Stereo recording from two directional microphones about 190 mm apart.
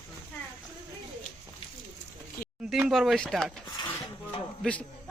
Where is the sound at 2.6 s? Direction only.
5° right (ahead or behind).